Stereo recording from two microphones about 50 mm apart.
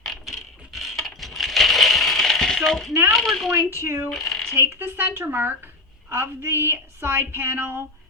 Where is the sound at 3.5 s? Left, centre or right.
Right.